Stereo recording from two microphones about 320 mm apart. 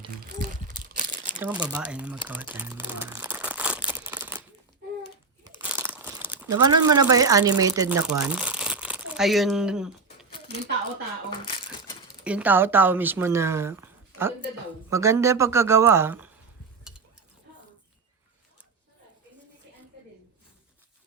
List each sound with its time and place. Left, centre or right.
1.4 s speech: centre
3.1 s crumpling: centre
5.7 s crumpling: centre
6.5 s speech: centre
11.3 s a sound: centre
12.2 s speech: centre